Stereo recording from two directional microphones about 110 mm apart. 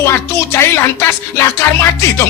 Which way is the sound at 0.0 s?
25° left (ahead or behind).